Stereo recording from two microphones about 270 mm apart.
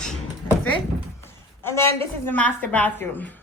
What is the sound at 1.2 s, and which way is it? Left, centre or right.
A woman's voice, centre.